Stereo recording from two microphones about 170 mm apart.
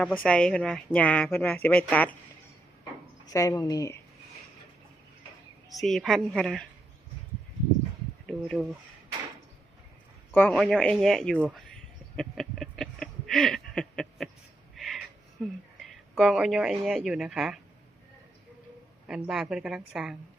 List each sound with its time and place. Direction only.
0.0 s a woman's voice: 5° left (ahead or behind)
3.2 s speech: 20° left (ahead or behind)
5.8 s a woman's voice: centre (ahead or behind)
8.3 s speech: centre (ahead or behind)
10.3 s a woman's voice: 10° left (ahead or behind)
12.1 s a sound: centre (ahead or behind)
15.4 s a woman's voice: centre (ahead or behind)
19.0 s a woman's voice: 5° right (ahead or behind)